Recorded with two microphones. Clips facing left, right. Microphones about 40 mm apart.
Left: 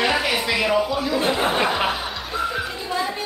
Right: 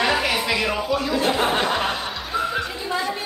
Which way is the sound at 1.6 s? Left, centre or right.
Centre.